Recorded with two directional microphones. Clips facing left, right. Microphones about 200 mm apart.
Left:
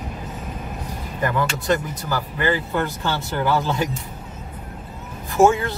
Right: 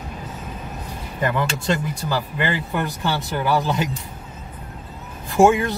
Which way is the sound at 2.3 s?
15° right (ahead or behind).